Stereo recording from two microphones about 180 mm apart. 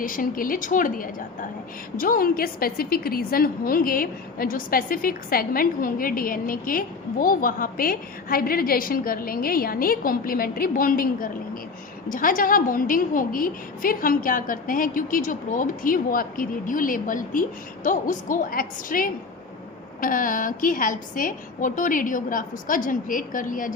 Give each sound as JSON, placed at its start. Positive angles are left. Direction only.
{"t": 0.0, "sound": "a woman's voice", "side_deg": 50}